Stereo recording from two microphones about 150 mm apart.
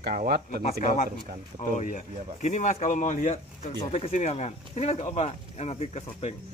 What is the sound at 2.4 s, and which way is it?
Speech, 55° left (ahead or behind).